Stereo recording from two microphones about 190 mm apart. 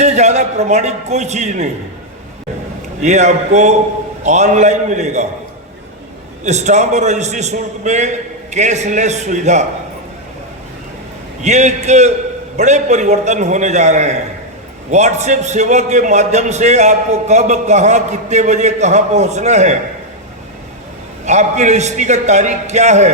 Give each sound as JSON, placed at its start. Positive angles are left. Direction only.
{"t": 0.0, "sound": "a man's voice", "side_deg": -35}
{"t": 3.0, "sound": "a man's voice", "side_deg": -40}
{"t": 6.4, "sound": "a man's voice", "side_deg": -35}
{"t": 11.4, "sound": "a man's voice", "side_deg": -35}
{"t": 21.2, "sound": "a man's voice", "side_deg": -40}